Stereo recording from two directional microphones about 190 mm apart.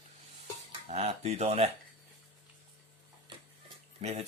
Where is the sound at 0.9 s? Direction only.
35° right (ahead or behind).